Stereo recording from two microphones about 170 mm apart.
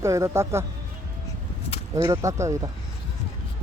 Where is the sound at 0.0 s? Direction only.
15° right (ahead or behind).